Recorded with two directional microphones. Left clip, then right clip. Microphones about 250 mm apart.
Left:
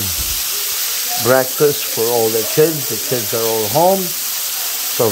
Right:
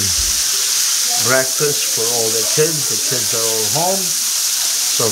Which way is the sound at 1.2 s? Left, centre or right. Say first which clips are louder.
Left 5 dB; left.